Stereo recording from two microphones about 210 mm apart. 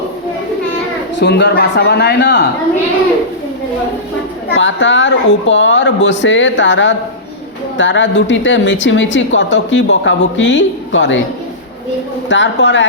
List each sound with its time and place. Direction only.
1.1 s speech: 55° left (ahead or behind)
4.5 s speech: 60° left (ahead or behind)
12.3 s speech: 60° left (ahead or behind)